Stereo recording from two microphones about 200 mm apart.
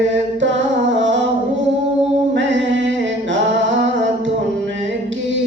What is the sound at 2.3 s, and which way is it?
Music, 65° right (ahead or behind).